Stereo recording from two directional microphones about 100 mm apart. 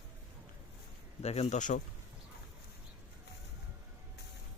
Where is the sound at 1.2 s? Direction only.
90° left.